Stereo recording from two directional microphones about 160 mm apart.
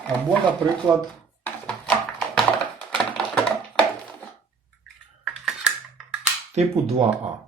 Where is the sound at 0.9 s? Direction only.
20° right (ahead or behind).